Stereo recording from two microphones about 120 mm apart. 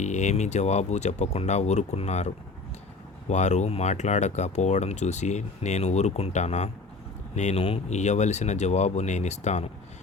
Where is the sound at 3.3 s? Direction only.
75° left (ahead or behind).